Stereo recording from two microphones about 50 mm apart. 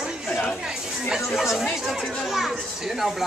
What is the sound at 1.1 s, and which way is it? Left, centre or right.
Speech, centre.